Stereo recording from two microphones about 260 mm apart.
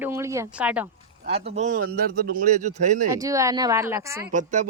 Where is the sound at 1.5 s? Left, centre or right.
Right.